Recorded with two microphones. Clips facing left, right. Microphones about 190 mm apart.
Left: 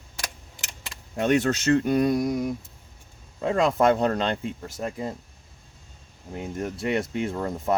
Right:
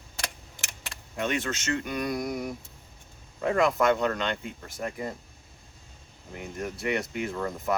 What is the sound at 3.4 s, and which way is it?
Speech, 25° left (ahead or behind).